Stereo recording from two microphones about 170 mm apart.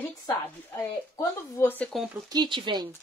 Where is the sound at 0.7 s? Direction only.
15° left (ahead or behind).